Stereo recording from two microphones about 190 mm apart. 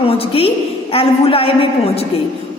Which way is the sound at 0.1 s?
30° left (ahead or behind).